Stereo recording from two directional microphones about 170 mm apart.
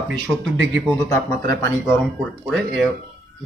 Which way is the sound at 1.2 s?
20° left (ahead or behind).